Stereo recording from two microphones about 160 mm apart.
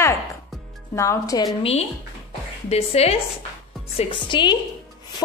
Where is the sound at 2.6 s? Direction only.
40° left (ahead or behind).